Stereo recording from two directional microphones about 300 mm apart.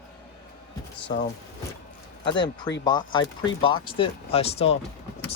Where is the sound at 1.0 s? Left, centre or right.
Left.